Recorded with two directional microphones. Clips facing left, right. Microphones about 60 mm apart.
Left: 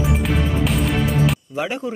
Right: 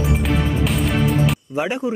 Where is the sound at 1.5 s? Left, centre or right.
Right.